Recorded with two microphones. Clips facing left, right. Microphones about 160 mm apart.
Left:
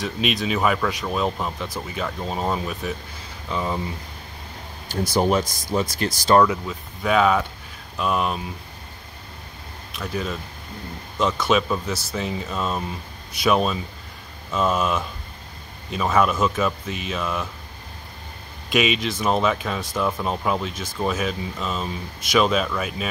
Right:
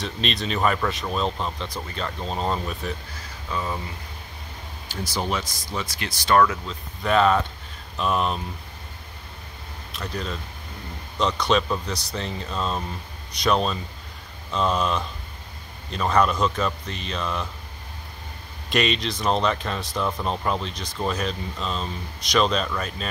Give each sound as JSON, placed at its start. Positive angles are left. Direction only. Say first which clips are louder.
{"t": 0.0, "sound": "speech", "louder": "left 4 dB", "side_deg": 0}
{"t": 3.4, "sound": "speech", "louder": "left 3 dB", "side_deg": 20}
{"t": 4.9, "sound": "speech", "louder": "left 7 dB", "side_deg": 50}
{"t": 6.4, "sound": "speech", "louder": "left 2 dB", "side_deg": 15}
{"t": 7.0, "sound": "speech", "louder": "left 1 dB", "side_deg": 0}
{"t": 9.9, "sound": "speech", "louder": "left 3 dB", "side_deg": 5}
{"t": 18.7, "sound": "speech", "louder": "left 2 dB", "side_deg": 0}